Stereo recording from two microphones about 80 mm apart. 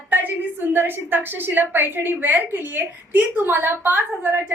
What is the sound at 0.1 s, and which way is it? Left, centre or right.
A woman's voice, right.